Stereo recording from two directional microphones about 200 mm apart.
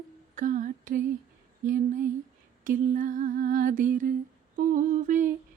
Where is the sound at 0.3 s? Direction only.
40° right (ahead or behind).